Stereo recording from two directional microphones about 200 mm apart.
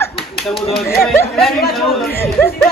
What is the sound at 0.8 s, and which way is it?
A man's voice, centre (ahead or behind).